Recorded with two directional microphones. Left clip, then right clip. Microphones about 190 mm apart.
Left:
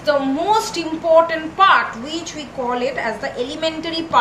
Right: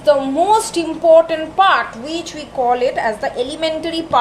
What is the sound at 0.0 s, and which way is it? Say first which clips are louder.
A woman's voice: right 4 dB; 50° right (ahead or behind).